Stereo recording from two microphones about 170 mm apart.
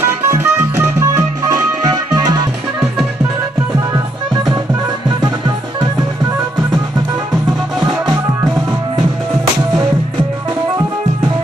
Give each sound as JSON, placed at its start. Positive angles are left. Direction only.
{"t": 0.0, "sound": "music", "side_deg": -15}